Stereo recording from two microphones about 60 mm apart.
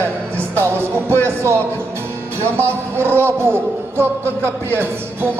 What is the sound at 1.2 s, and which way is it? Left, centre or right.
A man's voice, right.